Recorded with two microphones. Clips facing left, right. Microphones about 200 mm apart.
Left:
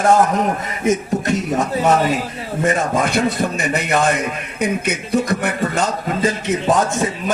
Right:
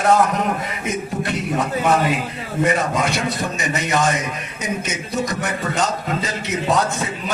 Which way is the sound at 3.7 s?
55° left (ahead or behind).